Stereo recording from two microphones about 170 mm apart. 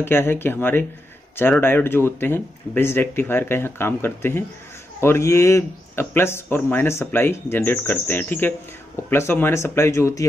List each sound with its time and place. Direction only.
0.0 s speech: 15° left (ahead or behind)